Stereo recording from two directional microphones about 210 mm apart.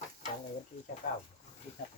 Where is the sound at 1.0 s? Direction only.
35° left (ahead or behind).